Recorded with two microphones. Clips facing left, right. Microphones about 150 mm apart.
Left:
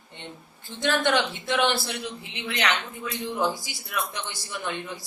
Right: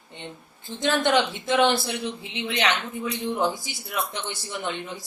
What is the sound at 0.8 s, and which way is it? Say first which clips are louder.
A woman's voice: right 2 dB; 20° right (ahead or behind).